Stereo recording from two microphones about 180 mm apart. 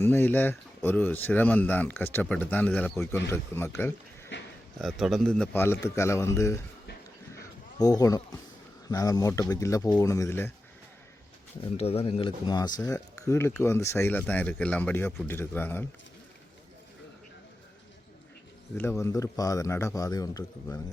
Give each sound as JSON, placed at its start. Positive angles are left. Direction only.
{"t": 0.0, "sound": "speech", "side_deg": 10}
{"t": 4.8, "sound": "speech", "side_deg": 0}
{"t": 7.8, "sound": "speech", "side_deg": 20}
{"t": 11.8, "sound": "speech", "side_deg": 35}
{"t": 18.8, "sound": "speech", "side_deg": 15}